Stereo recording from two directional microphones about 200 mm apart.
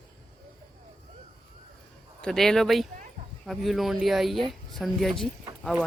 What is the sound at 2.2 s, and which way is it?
Speech, centre (ahead or behind).